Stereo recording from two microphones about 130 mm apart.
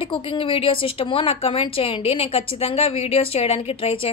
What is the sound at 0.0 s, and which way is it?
A woman's voice, 40° left (ahead or behind).